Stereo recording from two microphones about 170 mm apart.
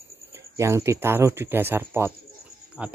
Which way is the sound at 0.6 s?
15° right (ahead or behind).